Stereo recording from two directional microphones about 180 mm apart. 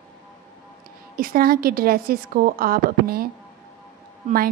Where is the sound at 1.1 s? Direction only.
55° right (ahead or behind).